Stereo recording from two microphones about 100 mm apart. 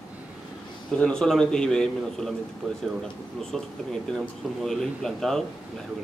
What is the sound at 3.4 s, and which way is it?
Speech, 5° left (ahead or behind).